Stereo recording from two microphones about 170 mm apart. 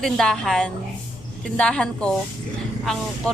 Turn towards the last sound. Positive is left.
turn(degrees=5)  # may be behind; listen again after turning